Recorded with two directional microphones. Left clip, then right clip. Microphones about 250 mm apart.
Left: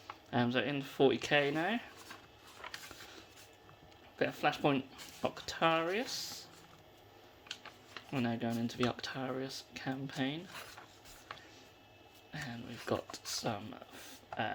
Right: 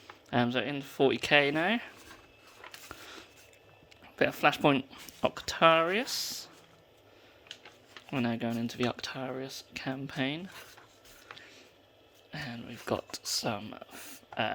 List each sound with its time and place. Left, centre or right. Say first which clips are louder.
0.3 s speech: right 4 dB; right
2.7 s a sound: right 2 dB; right
4.2 s speech: right 7 dB; right
8.1 s speech: right 4 dB; right
11.3 s a sound: right 1 dB; centre
12.3 s speech: right 4 dB; centre